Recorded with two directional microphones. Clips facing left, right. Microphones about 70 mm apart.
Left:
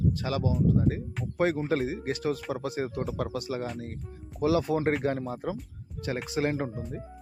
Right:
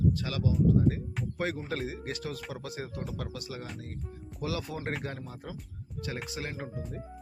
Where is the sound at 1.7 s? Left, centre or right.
Left.